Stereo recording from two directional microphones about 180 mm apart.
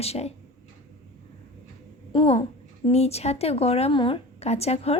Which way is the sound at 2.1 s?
30° left (ahead or behind).